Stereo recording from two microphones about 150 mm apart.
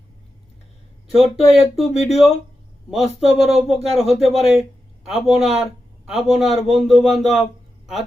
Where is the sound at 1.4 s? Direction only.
45° left (ahead or behind).